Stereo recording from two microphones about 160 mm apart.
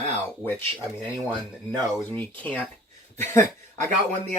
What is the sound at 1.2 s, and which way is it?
Speech, 20° right (ahead or behind).